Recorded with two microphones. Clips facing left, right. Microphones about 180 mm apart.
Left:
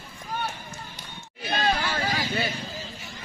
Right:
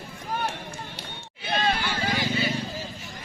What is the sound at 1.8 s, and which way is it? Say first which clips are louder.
Vehicle: even; 60° left (ahead or behind).